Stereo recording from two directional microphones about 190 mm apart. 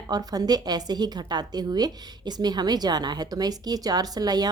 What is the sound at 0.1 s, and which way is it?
A woman's voice, 20° right (ahead or behind).